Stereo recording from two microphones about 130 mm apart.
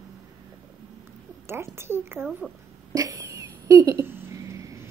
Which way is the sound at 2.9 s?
25° right (ahead or behind).